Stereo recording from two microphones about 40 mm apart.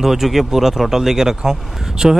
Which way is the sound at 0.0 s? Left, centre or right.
Centre.